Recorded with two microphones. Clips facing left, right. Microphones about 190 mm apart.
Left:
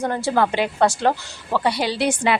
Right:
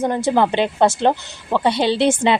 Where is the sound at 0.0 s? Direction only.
20° right (ahead or behind).